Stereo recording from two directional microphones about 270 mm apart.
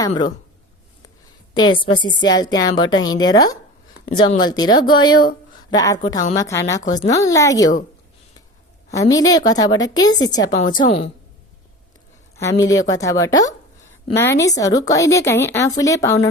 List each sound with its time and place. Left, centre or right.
0.1 s a woman's voice: left
1.5 s a woman's voice: centre
8.9 s a woman's voice: centre
12.9 s a woman's voice: centre